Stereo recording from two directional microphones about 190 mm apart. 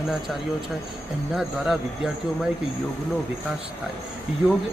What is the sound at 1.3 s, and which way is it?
Speech, centre (ahead or behind).